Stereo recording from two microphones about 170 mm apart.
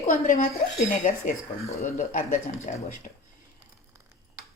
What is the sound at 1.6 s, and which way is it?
Speech, 40° left (ahead or behind).